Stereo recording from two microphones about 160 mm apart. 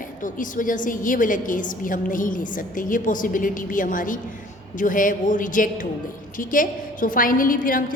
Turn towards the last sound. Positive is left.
turn(degrees=60)  # may be behind; listen again after turning